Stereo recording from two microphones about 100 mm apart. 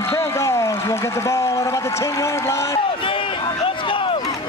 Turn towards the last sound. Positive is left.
turn(degrees=60)  # may be behind; listen again after turning